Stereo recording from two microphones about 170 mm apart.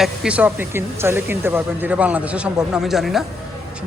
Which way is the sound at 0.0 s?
5° right (ahead or behind).